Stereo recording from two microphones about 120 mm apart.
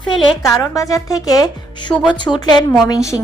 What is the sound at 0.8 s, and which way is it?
Speech, 30° left (ahead or behind).